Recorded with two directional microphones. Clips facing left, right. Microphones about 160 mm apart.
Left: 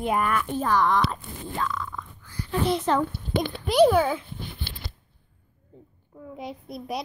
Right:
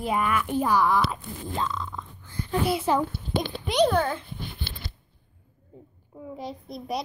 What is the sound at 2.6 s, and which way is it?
Speech, 10° right (ahead or behind).